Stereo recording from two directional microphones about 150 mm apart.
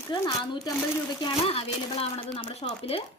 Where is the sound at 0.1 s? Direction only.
30° left (ahead or behind).